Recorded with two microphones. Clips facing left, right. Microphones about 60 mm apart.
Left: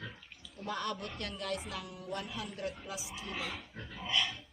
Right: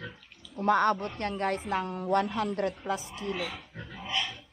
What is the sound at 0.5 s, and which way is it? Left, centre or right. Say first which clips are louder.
A woman's voice: right 13 dB; right.